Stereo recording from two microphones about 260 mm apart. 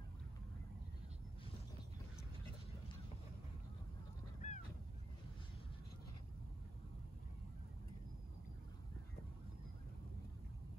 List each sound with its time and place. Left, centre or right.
4.4 s honk: left